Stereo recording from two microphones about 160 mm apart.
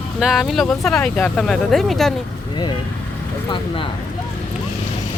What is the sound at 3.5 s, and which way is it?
Speech, 30° left (ahead or behind).